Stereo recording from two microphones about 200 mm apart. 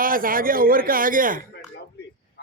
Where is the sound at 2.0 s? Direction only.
55° left (ahead or behind).